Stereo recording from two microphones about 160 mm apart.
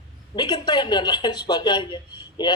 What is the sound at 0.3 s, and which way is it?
Speech, 25° left (ahead or behind).